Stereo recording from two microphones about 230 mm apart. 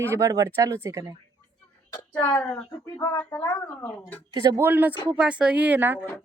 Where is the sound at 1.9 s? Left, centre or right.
Centre.